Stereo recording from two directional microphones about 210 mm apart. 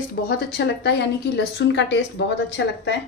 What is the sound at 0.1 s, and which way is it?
A woman's voice, 50° left (ahead or behind).